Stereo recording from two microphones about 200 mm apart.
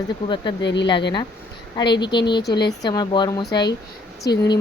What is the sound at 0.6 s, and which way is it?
Speech, 60° left (ahead or behind).